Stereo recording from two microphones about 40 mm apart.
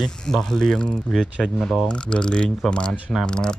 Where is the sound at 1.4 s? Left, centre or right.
Left.